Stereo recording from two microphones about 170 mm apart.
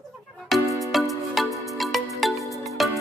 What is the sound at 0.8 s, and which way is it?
Music, centre (ahead or behind).